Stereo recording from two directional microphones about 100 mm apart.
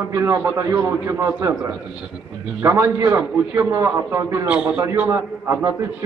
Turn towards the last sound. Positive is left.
turn(degrees=-25)  # may be behind; listen again after turning